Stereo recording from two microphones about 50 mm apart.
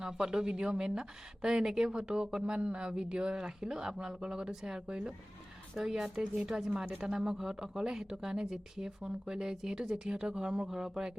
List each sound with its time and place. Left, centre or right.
0.0 s speech: centre